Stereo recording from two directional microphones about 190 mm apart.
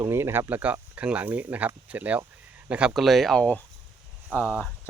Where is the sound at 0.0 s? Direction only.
15° right (ahead or behind).